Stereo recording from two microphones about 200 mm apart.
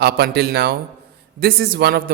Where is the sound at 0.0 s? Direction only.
55° right (ahead or behind).